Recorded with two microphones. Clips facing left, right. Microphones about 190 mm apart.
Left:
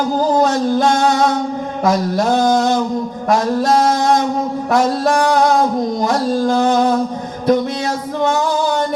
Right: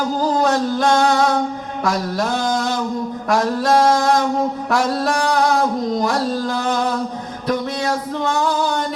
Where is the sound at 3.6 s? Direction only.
55° right (ahead or behind).